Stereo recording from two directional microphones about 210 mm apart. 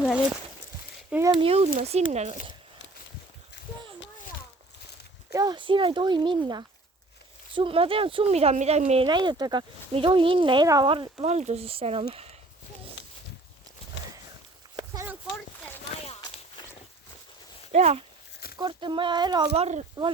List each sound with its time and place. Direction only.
1.1 s speech: 15° right (ahead or behind)
1.4 s speech: 30° right (ahead or behind)
5.3 s speech: 15° right (ahead or behind)
9.0 s speech: 20° right (ahead or behind)
13.0 s walk: 60° left (ahead or behind)
14.8 s a sound: 15° right (ahead or behind)
16.0 s walk: 30° left (ahead or behind)
17.7 s speech: 30° right (ahead or behind)
18.5 s speech: 20° right (ahead or behind)